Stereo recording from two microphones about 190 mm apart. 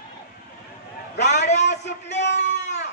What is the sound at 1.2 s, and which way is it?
Speech, 60° left (ahead or behind).